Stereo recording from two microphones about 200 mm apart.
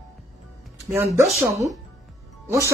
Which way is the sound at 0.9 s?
10° right (ahead or behind).